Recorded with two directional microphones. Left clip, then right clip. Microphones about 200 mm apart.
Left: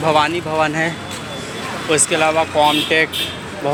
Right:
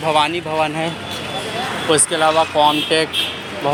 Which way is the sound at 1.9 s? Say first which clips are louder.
Even; 10° right (ahead or behind).